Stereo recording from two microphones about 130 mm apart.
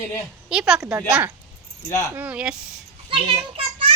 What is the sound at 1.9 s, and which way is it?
Speech, 25° left (ahead or behind).